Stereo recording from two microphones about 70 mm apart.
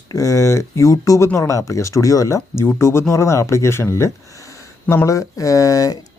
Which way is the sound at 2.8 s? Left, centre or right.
Left.